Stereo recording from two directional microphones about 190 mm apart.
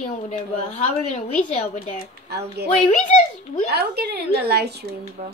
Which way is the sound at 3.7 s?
60° right (ahead or behind).